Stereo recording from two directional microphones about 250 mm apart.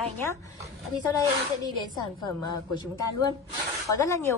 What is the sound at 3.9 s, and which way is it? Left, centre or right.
Speech, centre.